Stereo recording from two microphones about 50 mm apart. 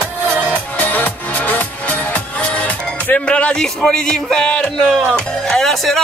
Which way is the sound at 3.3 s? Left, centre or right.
Left.